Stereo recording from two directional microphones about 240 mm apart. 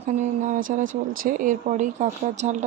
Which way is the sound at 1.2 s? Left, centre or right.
Right.